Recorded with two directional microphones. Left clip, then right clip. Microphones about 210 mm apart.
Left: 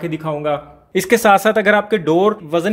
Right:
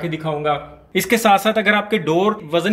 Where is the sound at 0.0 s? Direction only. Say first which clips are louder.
Left 1 dB; 40° left (ahead or behind).